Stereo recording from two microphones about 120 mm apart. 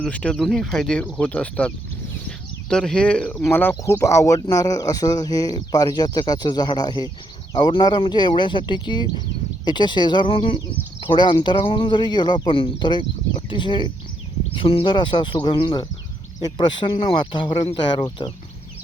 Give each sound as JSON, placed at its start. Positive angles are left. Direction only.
{"t": 0.0, "sound": "speech", "side_deg": 10}
{"t": 2.2, "sound": "a sound", "side_deg": 5}
{"t": 3.4, "sound": "speech", "side_deg": 20}